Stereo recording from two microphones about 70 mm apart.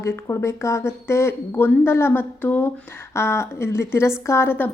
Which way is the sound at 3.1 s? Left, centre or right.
Left.